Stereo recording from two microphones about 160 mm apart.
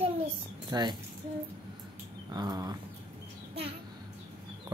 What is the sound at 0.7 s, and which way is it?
Speech, 25° right (ahead or behind).